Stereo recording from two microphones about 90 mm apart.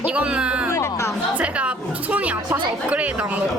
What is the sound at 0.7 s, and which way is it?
Music, 30° left (ahead or behind).